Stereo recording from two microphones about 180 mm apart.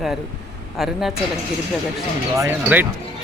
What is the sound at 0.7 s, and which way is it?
Speech, centre (ahead or behind).